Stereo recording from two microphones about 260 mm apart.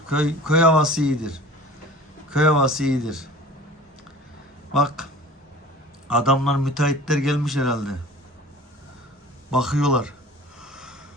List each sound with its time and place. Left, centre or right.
0.1 s a man's voice: centre
4.7 s a man's voice: centre
6.1 s a man's voice: centre
9.5 s a man's voice: centre
10.6 s snort: centre